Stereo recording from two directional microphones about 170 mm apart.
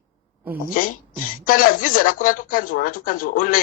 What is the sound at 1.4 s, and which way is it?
Speech, 55° left (ahead or behind).